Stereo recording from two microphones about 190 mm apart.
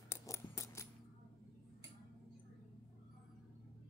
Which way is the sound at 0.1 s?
15° left (ahead or behind).